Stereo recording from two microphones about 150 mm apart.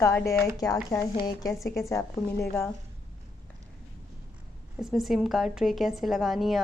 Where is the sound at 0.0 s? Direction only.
20° left (ahead or behind).